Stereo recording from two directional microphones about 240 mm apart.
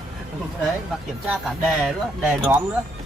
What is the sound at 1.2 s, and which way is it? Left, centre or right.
Speech, centre.